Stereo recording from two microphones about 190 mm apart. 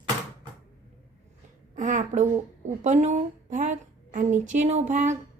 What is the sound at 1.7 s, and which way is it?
A woman's voice, 40° right (ahead or behind).